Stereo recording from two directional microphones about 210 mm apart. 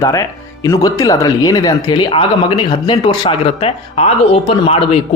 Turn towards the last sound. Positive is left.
turn(degrees=25)  # may be behind; listen again after turning